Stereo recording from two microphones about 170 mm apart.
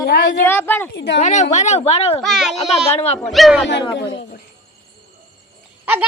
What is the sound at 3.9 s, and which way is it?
Speech, 90° left.